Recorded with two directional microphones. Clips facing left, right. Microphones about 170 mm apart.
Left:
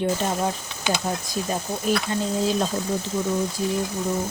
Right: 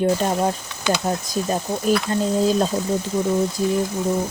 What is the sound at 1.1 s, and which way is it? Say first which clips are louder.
Speech: right 4 dB; 45° right (ahead or behind).